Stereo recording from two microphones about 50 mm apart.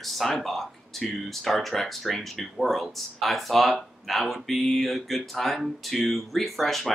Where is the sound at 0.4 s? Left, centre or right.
Centre.